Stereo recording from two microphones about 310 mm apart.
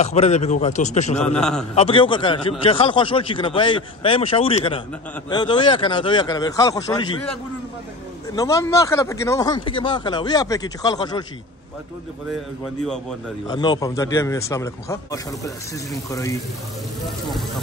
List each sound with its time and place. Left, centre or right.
0.0 s a man's voice: left
1.2 s a man's voice: centre
1.8 s speech: centre
8.4 s speech: centre
13.5 s a man's voice: centre